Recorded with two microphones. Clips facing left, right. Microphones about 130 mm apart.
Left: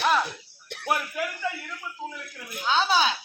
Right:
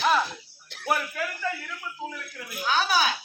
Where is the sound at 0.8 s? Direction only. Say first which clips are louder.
Even; 15° left (ahead or behind).